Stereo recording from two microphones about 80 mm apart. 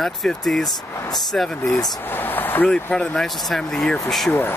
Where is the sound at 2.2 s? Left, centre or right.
Left.